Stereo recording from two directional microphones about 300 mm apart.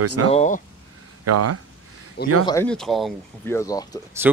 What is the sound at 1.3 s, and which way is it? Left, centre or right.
Speech, right.